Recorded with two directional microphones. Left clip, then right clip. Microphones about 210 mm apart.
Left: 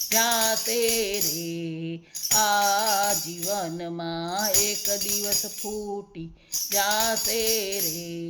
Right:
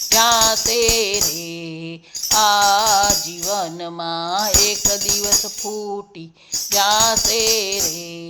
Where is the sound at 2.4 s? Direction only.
5° left (ahead or behind).